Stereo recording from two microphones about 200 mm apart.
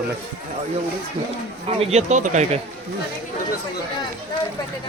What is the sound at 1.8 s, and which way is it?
Speech, 35° right (ahead or behind).